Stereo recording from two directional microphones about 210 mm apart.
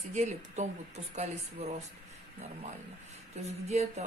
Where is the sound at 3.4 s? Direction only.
30° right (ahead or behind).